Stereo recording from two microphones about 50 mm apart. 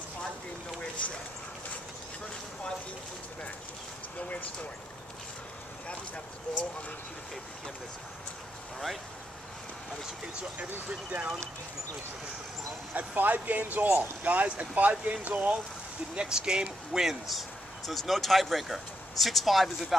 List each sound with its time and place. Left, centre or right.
4.2 s speech: left
5.9 s speech: left
10.6 s speech: right
12.9 s speech: right
16.2 s speech: centre